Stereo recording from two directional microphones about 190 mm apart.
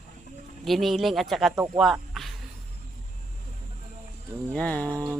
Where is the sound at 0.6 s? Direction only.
Centre (ahead or behind).